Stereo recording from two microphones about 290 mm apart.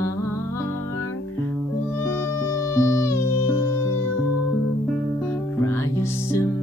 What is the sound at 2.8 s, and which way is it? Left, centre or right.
Music, centre.